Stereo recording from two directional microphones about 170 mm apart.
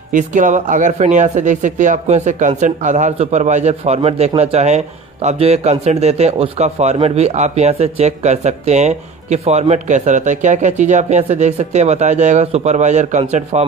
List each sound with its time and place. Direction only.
0.1 s speech: 50° right (ahead or behind)